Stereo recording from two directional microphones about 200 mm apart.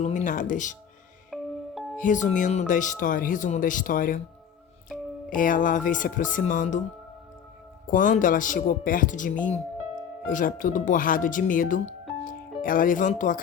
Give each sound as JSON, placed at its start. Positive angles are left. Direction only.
{"t": 0.0, "sound": "speech", "side_deg": 40}
{"t": 1.3, "sound": "music", "side_deg": 0}
{"t": 2.0, "sound": "speech", "side_deg": 40}
{"t": 4.9, "sound": "music", "side_deg": 0}
{"t": 5.3, "sound": "speech", "side_deg": 40}
{"t": 7.9, "sound": "speech", "side_deg": 40}